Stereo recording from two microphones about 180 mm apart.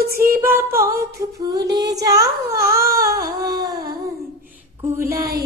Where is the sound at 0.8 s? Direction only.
15° right (ahead or behind).